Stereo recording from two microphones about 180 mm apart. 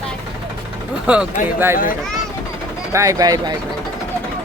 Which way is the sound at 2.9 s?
15° right (ahead or behind).